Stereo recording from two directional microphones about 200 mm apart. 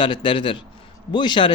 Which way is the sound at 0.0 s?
25° left (ahead or behind).